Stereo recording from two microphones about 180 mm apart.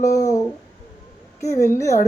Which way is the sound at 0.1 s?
20° left (ahead or behind).